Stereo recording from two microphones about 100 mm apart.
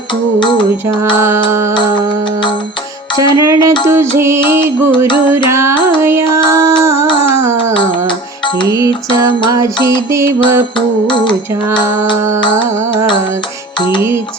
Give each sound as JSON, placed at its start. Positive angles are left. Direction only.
{"t": 0.3, "sound": "music", "side_deg": 50}
{"t": 1.1, "sound": "music", "side_deg": -25}
{"t": 3.2, "sound": "music", "side_deg": -30}
{"t": 8.6, "sound": "music", "side_deg": -30}
{"t": 10.1, "sound": "music", "side_deg": -30}
{"t": 10.8, "sound": "music", "side_deg": 50}